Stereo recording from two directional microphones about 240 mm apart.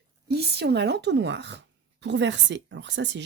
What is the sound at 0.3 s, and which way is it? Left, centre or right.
Speech, right.